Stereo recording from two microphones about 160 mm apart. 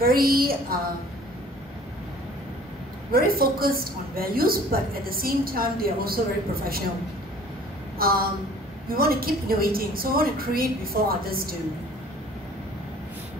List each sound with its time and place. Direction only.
0.0 s a woman's voice: 70° right (ahead or behind)
3.1 s a woman's voice: 70° right (ahead or behind)
8.0 s a woman's voice: 65° right (ahead or behind)